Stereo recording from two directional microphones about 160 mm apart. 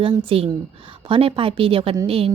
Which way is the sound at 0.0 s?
35° right (ahead or behind).